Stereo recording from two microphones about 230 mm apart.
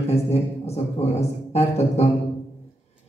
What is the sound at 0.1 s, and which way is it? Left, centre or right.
A man's voice, left.